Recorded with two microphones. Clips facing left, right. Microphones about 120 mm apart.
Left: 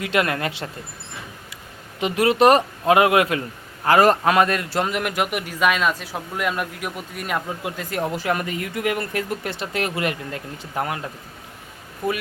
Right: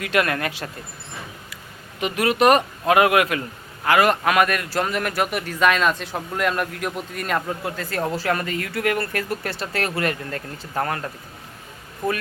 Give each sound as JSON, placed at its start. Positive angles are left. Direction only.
{"t": 0.0, "sound": "speech", "side_deg": 20}
{"t": 2.0, "sound": "a man's voice", "side_deg": 25}